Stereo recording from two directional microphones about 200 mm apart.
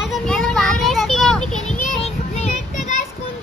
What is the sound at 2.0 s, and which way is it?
Child singing, 30° left (ahead or behind).